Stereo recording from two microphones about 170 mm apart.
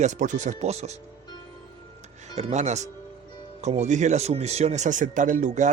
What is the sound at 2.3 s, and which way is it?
Speech, 40° right (ahead or behind).